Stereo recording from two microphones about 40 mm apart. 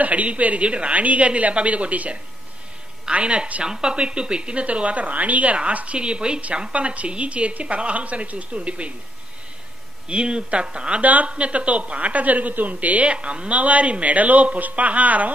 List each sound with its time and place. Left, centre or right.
0.0 s speech: right
3.6 s speech: centre; by 5.9 s right
5.9 s speech: right
10.0 s speech: right
11.0 s a woman's voice: right
11.2 s speech: right